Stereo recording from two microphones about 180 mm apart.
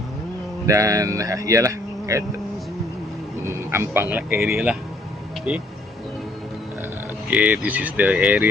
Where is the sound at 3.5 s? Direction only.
15° right (ahead or behind).